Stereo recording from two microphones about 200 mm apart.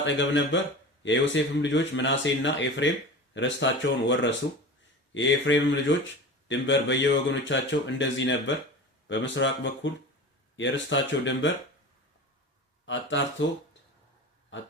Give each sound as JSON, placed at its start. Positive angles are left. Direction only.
{"t": 0.0, "sound": "a man's voice", "side_deg": 65}
{"t": 12.8, "sound": "speech", "side_deg": 65}